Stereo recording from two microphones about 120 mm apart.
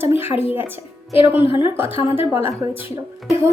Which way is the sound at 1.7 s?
15° right (ahead or behind).